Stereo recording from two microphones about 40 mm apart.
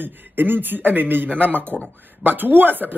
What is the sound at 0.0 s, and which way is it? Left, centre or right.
A man's voice, right.